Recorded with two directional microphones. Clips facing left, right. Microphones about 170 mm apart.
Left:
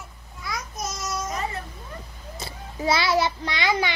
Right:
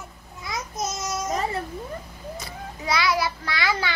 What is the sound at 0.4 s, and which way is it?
Babbling, 20° right (ahead or behind).